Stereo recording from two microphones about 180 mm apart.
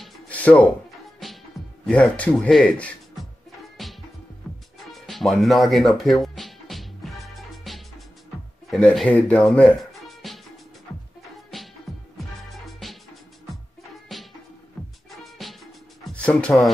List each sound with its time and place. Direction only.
0.0 s music: 5° left (ahead or behind)
8.6 s speech: centre (ahead or behind)
11.9 s music: centre (ahead or behind)
15.0 s music: centre (ahead or behind)